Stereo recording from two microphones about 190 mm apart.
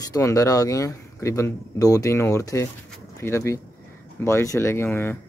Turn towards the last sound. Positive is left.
turn(degrees=10)  # may be behind; listen again after turning